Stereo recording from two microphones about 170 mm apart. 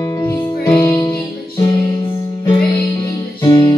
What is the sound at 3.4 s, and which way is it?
Music, 25° left (ahead or behind).